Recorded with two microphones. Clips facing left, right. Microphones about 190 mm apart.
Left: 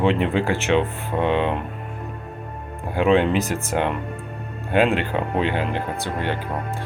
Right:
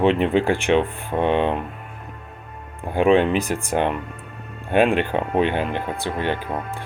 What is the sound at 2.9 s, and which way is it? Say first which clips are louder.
Speech: right 1 dB; 15° right (ahead or behind).